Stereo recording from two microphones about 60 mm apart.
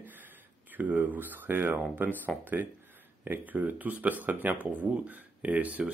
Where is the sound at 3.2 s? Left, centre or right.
Right.